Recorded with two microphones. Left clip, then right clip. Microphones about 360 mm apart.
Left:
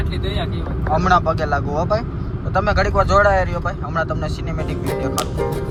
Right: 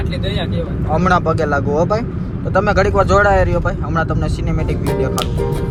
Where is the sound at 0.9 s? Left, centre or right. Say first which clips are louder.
Right 1 dB; centre.